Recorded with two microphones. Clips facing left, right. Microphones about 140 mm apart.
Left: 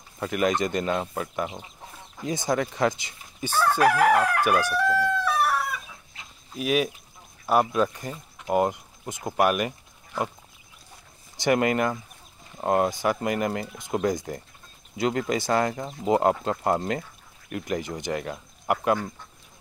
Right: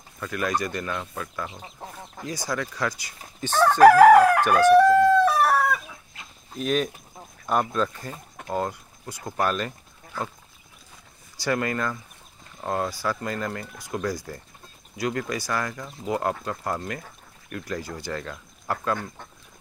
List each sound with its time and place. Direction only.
0.2 s speech: 20° left (ahead or behind)
3.4 s speech: 10° left (ahead or behind)
3.8 s crowing: 35° right (ahead or behind)
4.5 s speech: 10° left (ahead or behind)
5.2 s chicken: 45° right (ahead or behind)
6.5 s speech: 5° left (ahead or behind)
11.3 s speech: 20° left (ahead or behind)